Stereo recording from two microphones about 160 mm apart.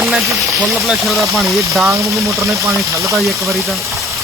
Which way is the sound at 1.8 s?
20° right (ahead or behind).